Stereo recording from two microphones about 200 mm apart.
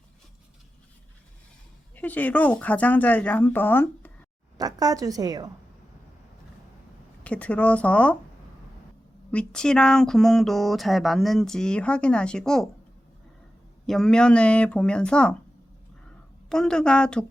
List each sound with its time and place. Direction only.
2.0 s speech: 10° left (ahead or behind)
4.5 s a woman's voice: 20° right (ahead or behind)
7.3 s speech: 5° left (ahead or behind)
9.3 s speech: 5° left (ahead or behind)
13.8 s speech: centre (ahead or behind)
16.5 s speech: 5° left (ahead or behind)